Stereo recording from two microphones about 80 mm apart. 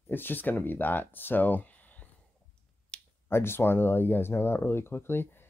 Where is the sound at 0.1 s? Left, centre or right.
Left.